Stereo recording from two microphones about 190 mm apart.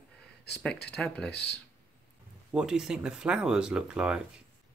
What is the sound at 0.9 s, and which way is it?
Speech, 5° left (ahead or behind).